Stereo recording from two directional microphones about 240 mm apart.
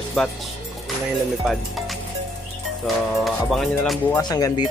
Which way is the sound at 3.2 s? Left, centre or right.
Centre.